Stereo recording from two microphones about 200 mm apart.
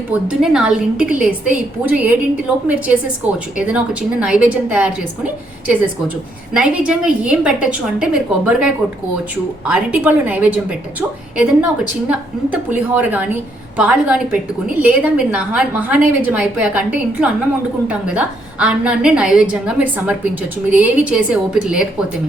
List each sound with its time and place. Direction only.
0.1 s a woman's voice: 5° right (ahead or behind)